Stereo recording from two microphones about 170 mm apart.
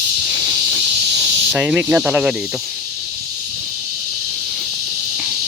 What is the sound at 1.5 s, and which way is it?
Speech, 5° right (ahead or behind).